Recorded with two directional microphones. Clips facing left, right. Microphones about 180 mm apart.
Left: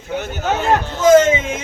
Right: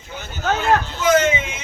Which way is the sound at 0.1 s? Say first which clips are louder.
Left 10 dB; 65° left (ahead or behind).